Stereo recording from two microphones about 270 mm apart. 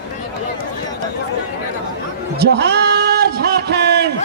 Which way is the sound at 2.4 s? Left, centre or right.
Right.